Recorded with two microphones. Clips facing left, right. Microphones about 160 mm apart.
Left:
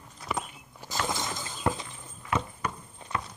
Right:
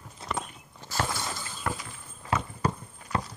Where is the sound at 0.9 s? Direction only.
15° left (ahead or behind).